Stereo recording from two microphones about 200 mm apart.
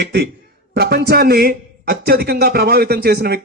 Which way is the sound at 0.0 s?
55° right (ahead or behind).